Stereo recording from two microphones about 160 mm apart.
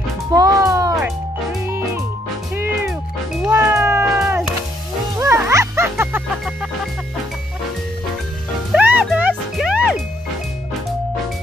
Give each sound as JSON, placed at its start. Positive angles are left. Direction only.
{"t": 0.3, "sound": "music", "side_deg": -20}
{"t": 3.4, "sound": "cat", "side_deg": -15}
{"t": 5.1, "sound": "music", "side_deg": -20}
{"t": 8.7, "sound": "music", "side_deg": -10}